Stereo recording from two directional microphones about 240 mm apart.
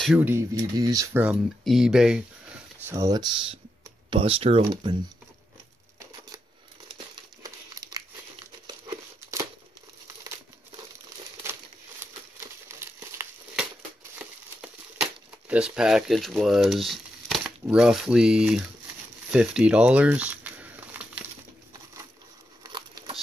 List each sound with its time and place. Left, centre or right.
0.0 s speech: centre
2.9 s speech: centre
7.4 s crumpling: centre
12.6 s crumpling: centre
22.6 s a sound: centre